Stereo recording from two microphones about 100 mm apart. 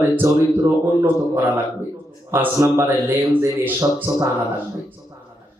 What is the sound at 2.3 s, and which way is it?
A man's voice, 25° right (ahead or behind).